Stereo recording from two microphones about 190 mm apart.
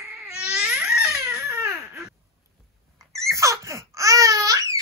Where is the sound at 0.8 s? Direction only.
5° right (ahead or behind).